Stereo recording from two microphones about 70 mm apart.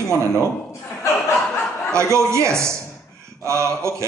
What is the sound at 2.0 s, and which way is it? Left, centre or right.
A man's voice, right.